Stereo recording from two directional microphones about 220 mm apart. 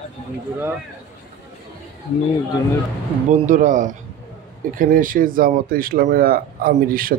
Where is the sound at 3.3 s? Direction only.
35° right (ahead or behind).